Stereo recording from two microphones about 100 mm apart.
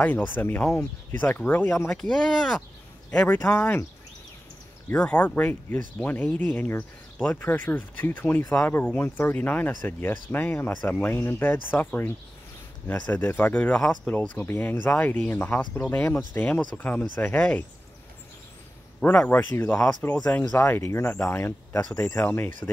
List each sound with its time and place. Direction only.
0.0 s speech: 20° left (ahead or behind)
1.9 s a man's voice: 5° left (ahead or behind)
4.8 s speech: 15° left (ahead or behind)
18.9 s speech: 15° left (ahead or behind)